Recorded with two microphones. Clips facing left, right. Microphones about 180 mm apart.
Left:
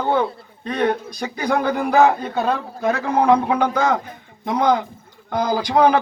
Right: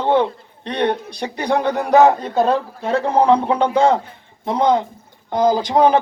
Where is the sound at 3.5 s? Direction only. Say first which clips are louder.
Right 3 dB; 30° right (ahead or behind).